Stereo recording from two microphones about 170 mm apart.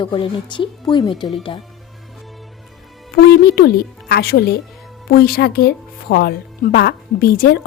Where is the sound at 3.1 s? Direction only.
65° left (ahead or behind).